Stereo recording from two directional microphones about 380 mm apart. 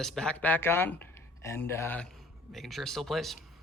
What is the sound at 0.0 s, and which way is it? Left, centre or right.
Speech, centre.